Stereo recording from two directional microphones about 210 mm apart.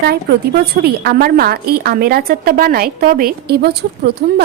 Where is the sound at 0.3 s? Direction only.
50° right (ahead or behind).